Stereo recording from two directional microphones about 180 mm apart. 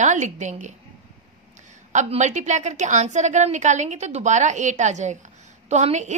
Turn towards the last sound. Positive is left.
turn(degrees=-40)  # may be behind; listen again after turning